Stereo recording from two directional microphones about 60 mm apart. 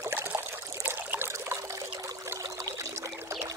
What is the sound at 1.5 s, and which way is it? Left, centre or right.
Pour, right.